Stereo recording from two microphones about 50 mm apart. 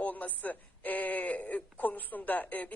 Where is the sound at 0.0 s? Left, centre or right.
Left.